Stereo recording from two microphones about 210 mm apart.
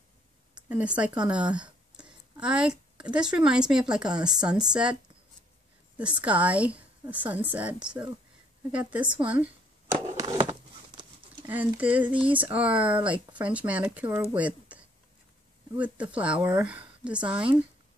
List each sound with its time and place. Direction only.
0.6 s speech: 5° right (ahead or behind)
5.9 s a woman's voice: 5° right (ahead or behind)
10.1 s a sound: 25° right (ahead or behind)
11.4 s a woman's voice: 10° right (ahead or behind)